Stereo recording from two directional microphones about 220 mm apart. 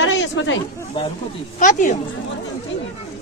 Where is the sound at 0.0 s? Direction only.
60° left (ahead or behind).